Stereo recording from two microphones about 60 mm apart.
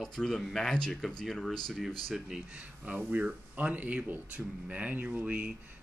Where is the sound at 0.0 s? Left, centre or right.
Centre.